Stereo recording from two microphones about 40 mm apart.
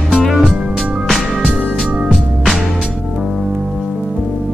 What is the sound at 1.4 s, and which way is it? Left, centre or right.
Music, right.